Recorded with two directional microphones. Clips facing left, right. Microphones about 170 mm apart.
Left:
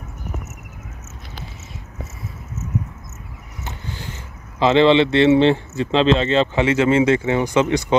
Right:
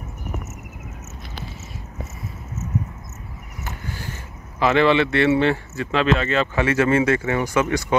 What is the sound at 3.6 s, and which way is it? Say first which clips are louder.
Speech: even; 20° left (ahead or behind).